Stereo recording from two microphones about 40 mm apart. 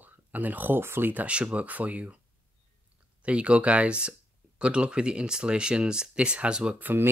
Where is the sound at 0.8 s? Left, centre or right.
Right.